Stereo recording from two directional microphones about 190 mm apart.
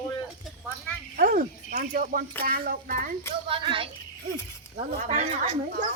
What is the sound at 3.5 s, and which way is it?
Speech, 30° right (ahead or behind).